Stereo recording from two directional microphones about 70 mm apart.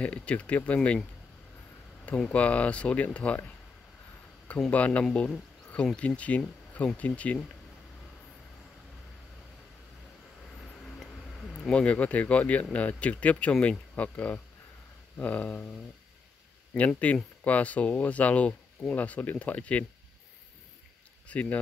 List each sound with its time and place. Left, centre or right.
0.0 s speech: centre
2.0 s speech: centre
4.6 s speech: centre
11.0 s speech: centre
16.7 s speech: left
21.3 s speech: left